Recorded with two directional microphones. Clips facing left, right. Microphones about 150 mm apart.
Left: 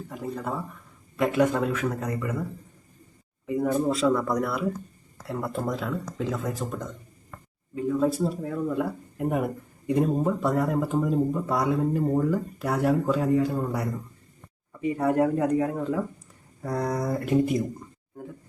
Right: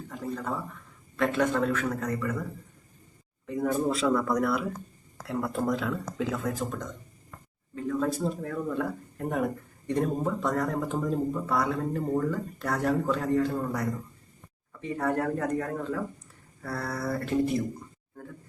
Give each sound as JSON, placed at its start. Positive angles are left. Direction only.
{"t": 0.1, "sound": "speech", "side_deg": 10}
{"t": 3.4, "sound": "speech", "side_deg": 10}